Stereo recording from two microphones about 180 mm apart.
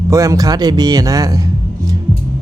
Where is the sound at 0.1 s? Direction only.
20° right (ahead or behind).